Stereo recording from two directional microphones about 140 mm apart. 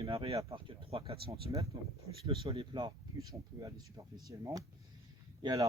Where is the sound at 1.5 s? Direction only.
30° right (ahead or behind).